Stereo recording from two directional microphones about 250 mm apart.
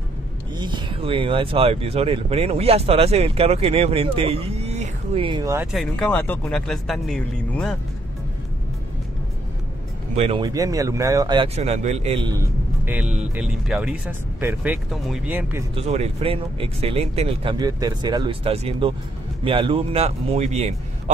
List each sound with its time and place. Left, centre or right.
0.6 s speech: centre
10.1 s speech: right
12.4 s speech: centre
15.7 s speech: right